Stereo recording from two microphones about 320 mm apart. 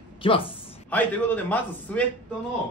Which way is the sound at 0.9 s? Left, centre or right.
Centre.